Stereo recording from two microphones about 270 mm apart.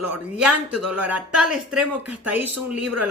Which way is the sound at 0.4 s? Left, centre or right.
Right.